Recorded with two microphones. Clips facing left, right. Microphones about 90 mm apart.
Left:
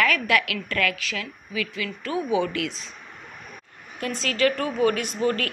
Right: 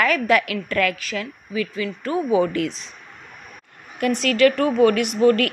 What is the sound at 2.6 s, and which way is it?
Speech, 45° left (ahead or behind).